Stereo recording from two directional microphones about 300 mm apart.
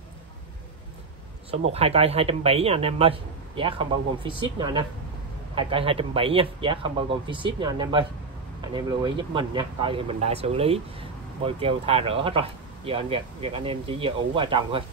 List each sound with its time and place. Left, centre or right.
1.7 s speech: centre